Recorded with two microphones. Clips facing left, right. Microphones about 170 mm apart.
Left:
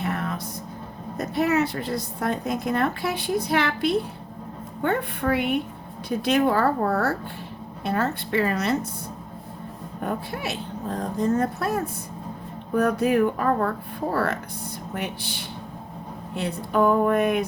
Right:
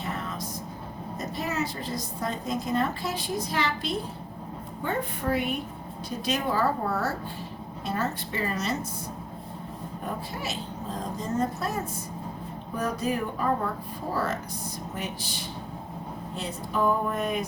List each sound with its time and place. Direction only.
0.0 s a sound: 60° left (ahead or behind)
1.4 s a woman's voice: 65° left (ahead or behind)
10.0 s a woman's voice: 60° left (ahead or behind)